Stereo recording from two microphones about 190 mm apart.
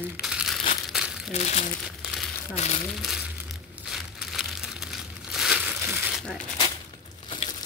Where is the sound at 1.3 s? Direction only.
35° left (ahead or behind).